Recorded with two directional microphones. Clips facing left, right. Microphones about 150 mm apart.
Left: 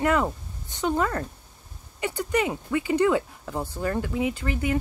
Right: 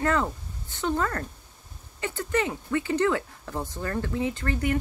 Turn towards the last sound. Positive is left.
turn(degrees=10)  # may be behind; listen again after turning